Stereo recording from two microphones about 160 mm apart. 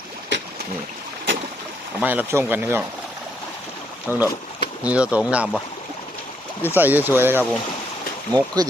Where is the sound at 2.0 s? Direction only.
10° right (ahead or behind).